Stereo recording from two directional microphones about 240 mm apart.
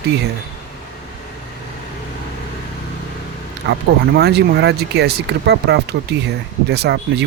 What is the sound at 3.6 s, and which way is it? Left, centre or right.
Speech, right.